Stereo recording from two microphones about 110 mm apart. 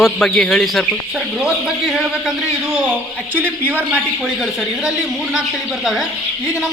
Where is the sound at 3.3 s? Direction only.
15° right (ahead or behind).